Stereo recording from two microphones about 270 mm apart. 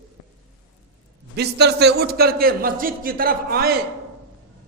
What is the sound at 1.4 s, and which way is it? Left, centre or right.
A man's voice, right.